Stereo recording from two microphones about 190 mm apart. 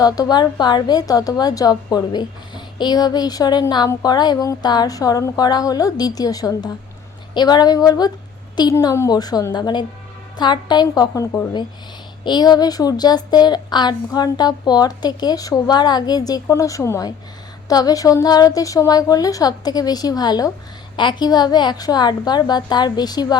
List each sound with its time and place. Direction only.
0.0 s a woman's voice: 20° left (ahead or behind)